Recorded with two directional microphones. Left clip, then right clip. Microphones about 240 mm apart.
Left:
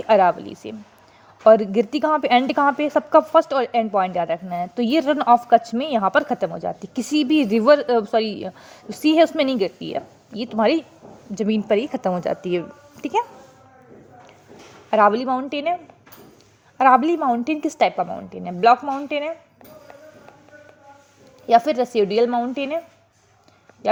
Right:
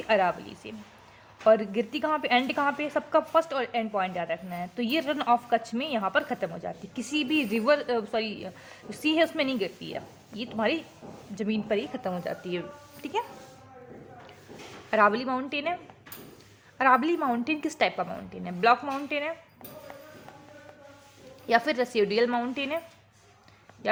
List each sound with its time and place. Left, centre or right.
0.1 s a woman's voice: left
14.8 s a woman's voice: centre
16.7 s a woman's voice: left
17.2 s a woman's voice: centre
17.4 s a woman's voice: centre
21.4 s a woman's voice: centre
23.8 s a woman's voice: centre